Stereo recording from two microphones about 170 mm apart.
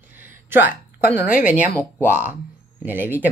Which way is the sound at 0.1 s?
10° right (ahead or behind).